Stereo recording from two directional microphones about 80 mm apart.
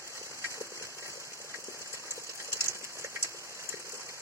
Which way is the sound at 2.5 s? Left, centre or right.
Right.